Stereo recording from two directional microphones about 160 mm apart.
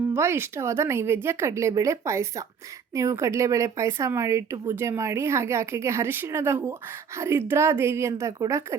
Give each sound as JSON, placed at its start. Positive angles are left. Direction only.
{"t": 0.1, "sound": "speech", "side_deg": -15}